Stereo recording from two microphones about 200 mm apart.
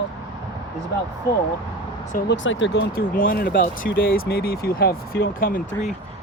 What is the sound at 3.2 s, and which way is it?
Speech, 45° left (ahead or behind).